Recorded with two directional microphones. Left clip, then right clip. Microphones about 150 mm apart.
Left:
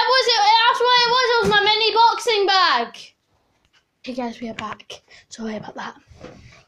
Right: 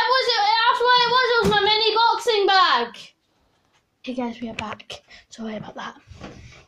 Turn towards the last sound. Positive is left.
turn(degrees=20)  # may be behind; listen again after turning